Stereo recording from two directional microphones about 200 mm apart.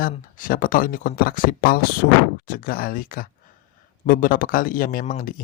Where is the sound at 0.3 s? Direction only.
45° left (ahead or behind).